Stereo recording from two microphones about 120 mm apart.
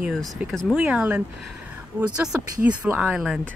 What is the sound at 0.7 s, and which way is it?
Speech, 10° right (ahead or behind).